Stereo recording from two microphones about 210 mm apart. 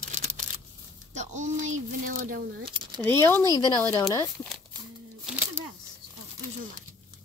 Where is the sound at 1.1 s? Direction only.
35° right (ahead or behind).